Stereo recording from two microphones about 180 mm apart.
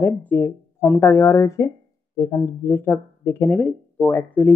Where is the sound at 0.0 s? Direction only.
10° left (ahead or behind).